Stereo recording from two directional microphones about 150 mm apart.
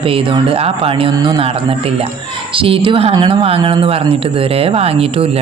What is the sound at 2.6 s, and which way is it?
A man's voice, 35° right (ahead or behind).